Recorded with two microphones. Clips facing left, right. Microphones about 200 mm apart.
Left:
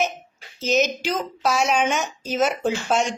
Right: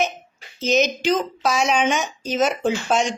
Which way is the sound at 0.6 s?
5° left (ahead or behind).